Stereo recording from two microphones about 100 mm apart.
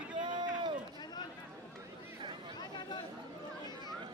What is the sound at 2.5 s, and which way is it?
Chatter, 45° left (ahead or behind).